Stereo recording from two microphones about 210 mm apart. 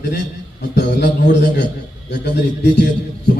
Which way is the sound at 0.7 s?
50° left (ahead or behind).